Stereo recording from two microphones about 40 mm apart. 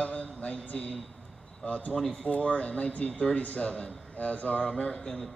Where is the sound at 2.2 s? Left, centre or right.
Left.